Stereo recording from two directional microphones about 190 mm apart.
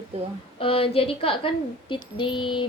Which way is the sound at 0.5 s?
30° left (ahead or behind).